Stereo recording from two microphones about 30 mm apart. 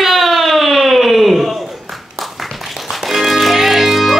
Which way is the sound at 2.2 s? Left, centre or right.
Centre.